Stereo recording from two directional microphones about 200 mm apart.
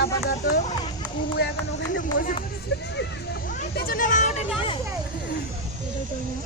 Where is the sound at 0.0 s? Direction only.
50° left (ahead or behind).